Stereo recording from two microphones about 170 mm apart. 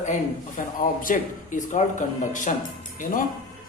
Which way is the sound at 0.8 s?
55° left (ahead or behind).